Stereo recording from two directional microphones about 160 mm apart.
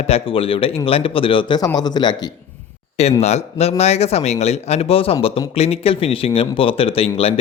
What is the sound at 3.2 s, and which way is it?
A man's voice, 40° left (ahead or behind).